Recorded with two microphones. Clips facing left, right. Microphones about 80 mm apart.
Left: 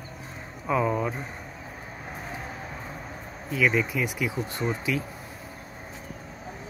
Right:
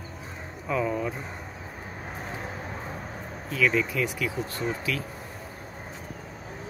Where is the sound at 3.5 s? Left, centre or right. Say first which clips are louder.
Left 1 dB; centre.